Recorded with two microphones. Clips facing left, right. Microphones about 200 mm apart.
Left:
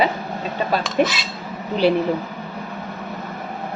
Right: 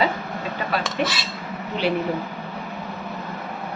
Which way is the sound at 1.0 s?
50° left (ahead or behind).